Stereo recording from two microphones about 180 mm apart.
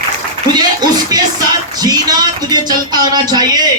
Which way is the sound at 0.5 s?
20° right (ahead or behind).